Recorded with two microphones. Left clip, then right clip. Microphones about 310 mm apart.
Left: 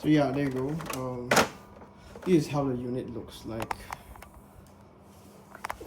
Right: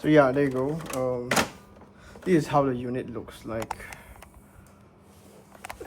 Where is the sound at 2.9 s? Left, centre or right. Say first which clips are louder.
Right 2 dB; centre.